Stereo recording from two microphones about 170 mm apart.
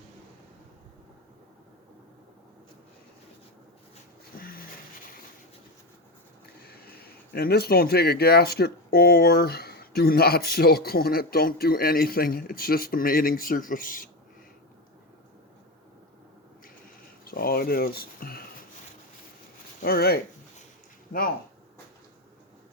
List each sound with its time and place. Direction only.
4.4 s a sound: 60° left (ahead or behind)
6.4 s speech: 65° left (ahead or behind)
17.2 s speech: 60° left (ahead or behind)
19.8 s speech: 65° left (ahead or behind)